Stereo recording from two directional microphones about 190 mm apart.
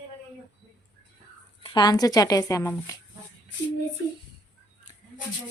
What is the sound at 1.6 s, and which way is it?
Speech, 20° left (ahead or behind).